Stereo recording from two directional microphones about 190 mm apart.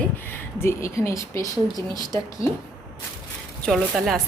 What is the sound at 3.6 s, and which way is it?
Speech, centre (ahead or behind).